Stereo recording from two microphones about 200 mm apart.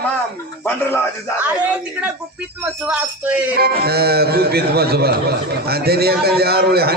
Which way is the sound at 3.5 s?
50° right (ahead or behind).